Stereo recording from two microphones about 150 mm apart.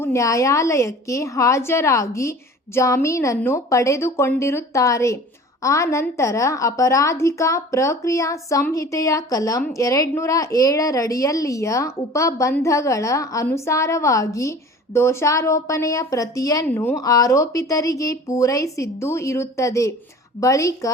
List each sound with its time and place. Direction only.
0.0 s a woman's voice: 20° left (ahead or behind)